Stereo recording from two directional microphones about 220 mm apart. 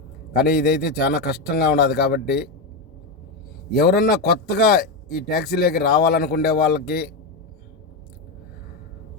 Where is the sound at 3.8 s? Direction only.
45° left (ahead or behind).